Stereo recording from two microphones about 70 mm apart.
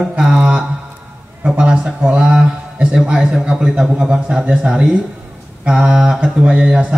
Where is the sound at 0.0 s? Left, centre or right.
Centre.